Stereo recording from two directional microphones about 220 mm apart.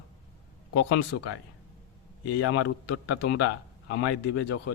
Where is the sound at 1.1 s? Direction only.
60° left (ahead or behind).